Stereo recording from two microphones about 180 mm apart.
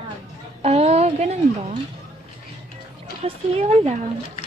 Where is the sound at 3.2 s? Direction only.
35° right (ahead or behind).